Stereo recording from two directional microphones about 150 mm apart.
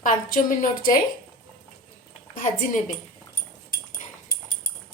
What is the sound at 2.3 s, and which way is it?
Speech, 60° left (ahead or behind).